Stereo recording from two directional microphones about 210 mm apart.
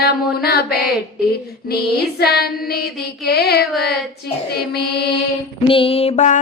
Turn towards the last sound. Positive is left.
turn(degrees=35)  # may be behind; listen again after turning